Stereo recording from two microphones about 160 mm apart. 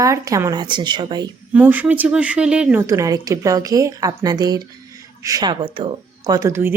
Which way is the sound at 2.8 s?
20° right (ahead or behind).